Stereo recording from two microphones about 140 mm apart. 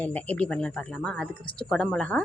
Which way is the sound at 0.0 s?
10° left (ahead or behind).